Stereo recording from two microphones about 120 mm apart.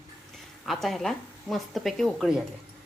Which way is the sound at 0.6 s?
Centre (ahead or behind).